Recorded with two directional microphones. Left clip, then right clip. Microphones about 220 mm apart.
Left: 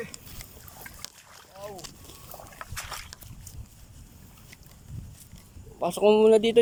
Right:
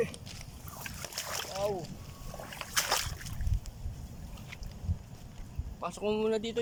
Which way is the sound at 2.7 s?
35° right (ahead or behind).